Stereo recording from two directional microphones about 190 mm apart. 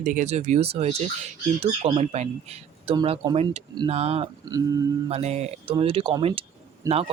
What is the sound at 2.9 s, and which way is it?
Speech, 25° right (ahead or behind).